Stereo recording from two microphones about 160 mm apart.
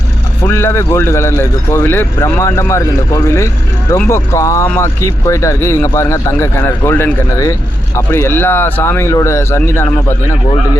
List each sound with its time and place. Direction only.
0.4 s a man's voice: 15° left (ahead or behind)